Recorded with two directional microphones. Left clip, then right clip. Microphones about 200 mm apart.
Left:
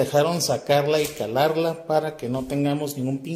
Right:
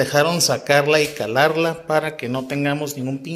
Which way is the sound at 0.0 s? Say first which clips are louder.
Right 3 dB; centre (ahead or behind).